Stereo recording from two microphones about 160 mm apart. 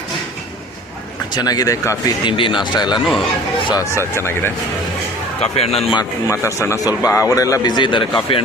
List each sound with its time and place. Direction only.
1.3 s a man's voice: 25° left (ahead or behind)
2.2 s a man's voice: 30° left (ahead or behind); by 4.5 s 15° left (ahead or behind)
5.4 s speech: 40° left (ahead or behind)
6.0 s a man's voice: 20° left (ahead or behind)